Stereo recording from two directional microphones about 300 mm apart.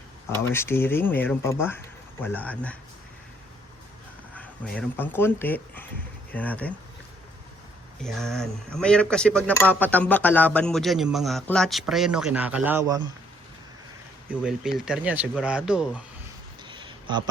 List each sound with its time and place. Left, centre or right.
0.3 s speech: centre
4.4 s speech: centre
8.0 s speech: centre
14.8 s speech: centre
16.6 s a sound: centre